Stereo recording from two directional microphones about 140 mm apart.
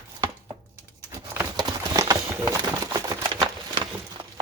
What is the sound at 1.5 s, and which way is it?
Clip-clop, 25° right (ahead or behind).